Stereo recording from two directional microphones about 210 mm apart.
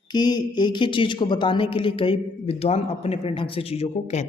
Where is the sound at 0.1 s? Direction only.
20° left (ahead or behind).